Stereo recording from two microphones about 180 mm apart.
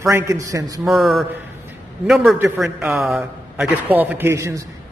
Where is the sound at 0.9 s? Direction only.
Centre (ahead or behind).